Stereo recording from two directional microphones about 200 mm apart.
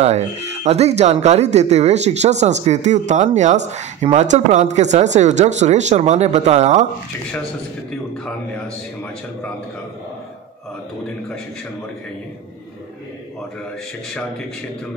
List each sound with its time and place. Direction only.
0.0 s speech: 35° right (ahead or behind)